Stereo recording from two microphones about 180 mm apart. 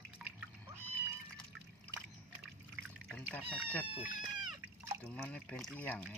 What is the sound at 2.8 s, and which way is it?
Cat, 5° left (ahead or behind).